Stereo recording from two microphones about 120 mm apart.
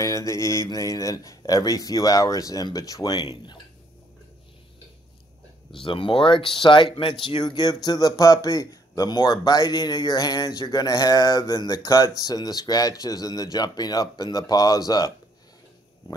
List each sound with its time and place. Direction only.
0.0 s speech: 25° left (ahead or behind)
5.9 s speech: 45° left (ahead or behind)